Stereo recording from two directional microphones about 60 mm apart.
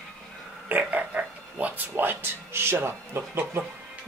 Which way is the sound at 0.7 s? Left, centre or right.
Right.